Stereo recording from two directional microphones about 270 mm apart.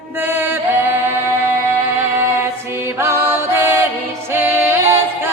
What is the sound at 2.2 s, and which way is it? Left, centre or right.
Music, centre.